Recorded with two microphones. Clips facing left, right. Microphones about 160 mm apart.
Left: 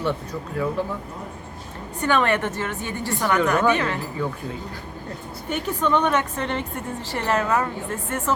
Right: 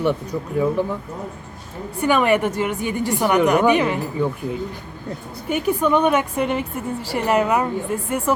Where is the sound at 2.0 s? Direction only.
10° right (ahead or behind).